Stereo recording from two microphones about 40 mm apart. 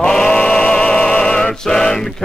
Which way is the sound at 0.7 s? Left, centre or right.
Left.